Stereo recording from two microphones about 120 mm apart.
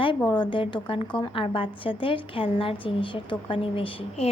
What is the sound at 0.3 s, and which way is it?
A woman's voice, 40° left (ahead or behind).